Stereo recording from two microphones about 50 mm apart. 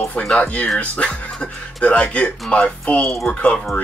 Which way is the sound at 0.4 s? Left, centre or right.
Left.